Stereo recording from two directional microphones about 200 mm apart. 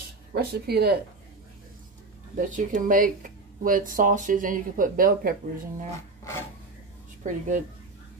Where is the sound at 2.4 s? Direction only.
40° right (ahead or behind).